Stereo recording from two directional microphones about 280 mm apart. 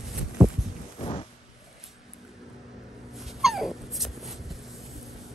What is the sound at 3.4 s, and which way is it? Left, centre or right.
Dog, centre.